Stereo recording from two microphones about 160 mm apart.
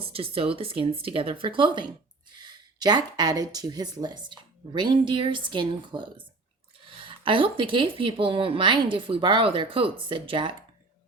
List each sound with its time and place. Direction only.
0.0 s speech: 35° right (ahead or behind)